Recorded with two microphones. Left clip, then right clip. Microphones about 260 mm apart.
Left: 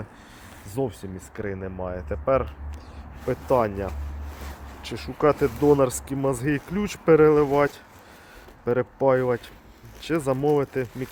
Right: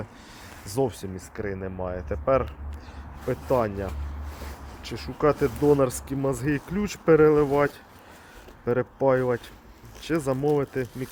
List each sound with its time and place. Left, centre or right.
0.8 s speech: centre
1.4 s speech: centre
3.2 s speech: centre